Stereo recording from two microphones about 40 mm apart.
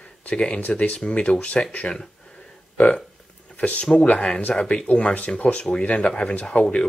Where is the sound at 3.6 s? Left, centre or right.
Left.